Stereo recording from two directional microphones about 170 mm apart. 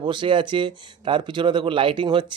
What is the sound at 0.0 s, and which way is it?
Speech, 30° right (ahead or behind).